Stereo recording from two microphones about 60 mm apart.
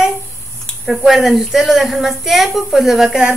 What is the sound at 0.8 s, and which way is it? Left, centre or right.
A woman's voice, centre.